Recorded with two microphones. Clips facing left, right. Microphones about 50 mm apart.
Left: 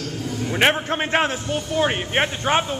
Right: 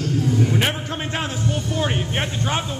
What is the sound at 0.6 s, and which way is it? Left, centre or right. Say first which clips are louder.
Speech: left 5 dB; left.